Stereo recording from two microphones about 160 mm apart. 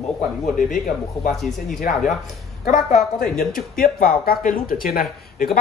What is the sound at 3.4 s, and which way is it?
A man's voice, 65° left (ahead or behind).